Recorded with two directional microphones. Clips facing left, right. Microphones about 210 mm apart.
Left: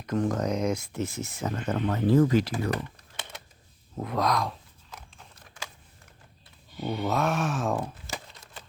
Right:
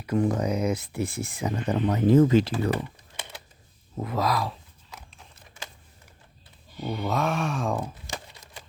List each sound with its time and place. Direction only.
0.0 s speech: 10° right (ahead or behind)
2.6 s typing: 10° right (ahead or behind)
3.9 s speech: centre (ahead or behind)
6.7 s speech: centre (ahead or behind)
8.1 s crumpling: 15° right (ahead or behind)